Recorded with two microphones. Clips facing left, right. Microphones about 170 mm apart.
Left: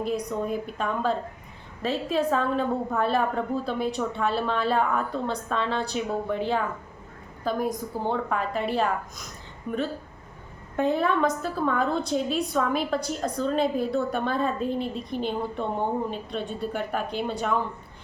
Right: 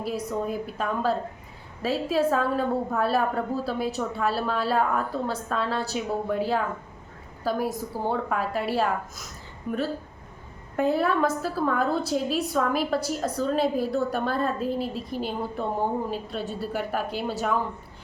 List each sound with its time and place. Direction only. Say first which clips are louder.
0.0 s a woman's voice: left 1 dB; 5° right (ahead or behind)
10.8 s a woman's voice: even; 5° right (ahead or behind)